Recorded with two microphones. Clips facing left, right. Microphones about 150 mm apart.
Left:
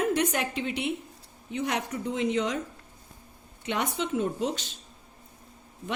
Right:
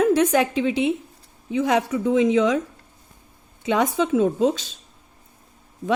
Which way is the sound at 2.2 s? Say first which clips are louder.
Right 9 dB; 90° right.